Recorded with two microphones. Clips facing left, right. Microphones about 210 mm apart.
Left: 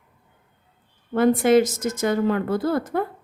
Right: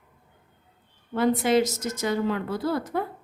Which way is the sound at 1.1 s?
50° left (ahead or behind).